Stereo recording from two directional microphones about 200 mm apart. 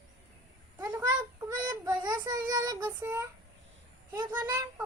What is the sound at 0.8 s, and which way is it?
Child singing, 15° right (ahead or behind).